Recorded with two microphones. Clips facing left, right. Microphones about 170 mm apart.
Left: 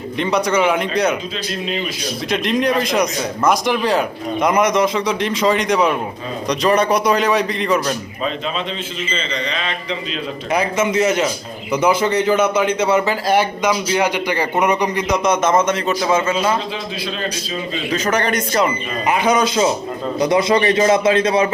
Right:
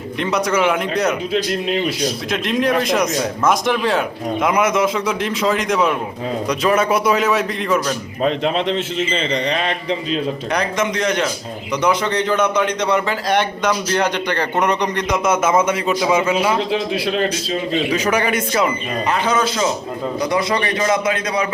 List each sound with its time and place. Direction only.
0.2 s speech: centre (ahead or behind)
1.3 s speech: 60° right (ahead or behind)
2.3 s speech: centre (ahead or behind)
8.2 s speech: 65° right (ahead or behind)
9.5 s a man's voice: 45° right (ahead or behind)
10.5 s a man's voice: 5° left (ahead or behind)
15.2 s a man's voice: 5° right (ahead or behind)
16.7 s speech: 65° right (ahead or behind)
17.9 s a man's voice: 10° right (ahead or behind)
19.0 s a man's voice: 10° left (ahead or behind)